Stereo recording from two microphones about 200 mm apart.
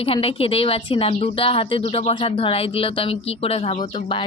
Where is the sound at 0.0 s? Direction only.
30° left (ahead or behind).